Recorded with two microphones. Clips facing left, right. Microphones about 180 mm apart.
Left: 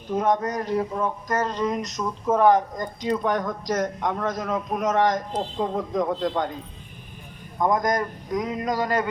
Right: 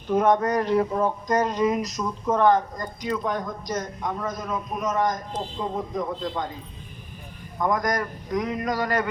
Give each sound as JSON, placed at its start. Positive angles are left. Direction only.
{"t": 0.1, "sound": "speech", "side_deg": -60}
{"t": 1.3, "sound": "speech", "side_deg": -15}
{"t": 3.2, "sound": "a man's voice", "side_deg": 80}
{"t": 7.6, "sound": "a man's voice", "side_deg": 20}